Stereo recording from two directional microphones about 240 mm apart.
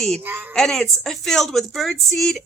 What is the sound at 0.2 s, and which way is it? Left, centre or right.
Speech, centre.